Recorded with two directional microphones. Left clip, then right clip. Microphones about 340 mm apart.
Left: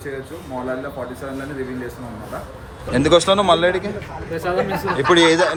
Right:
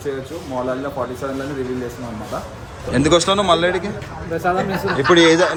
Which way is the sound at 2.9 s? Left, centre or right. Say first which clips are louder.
Left 1 dB; centre.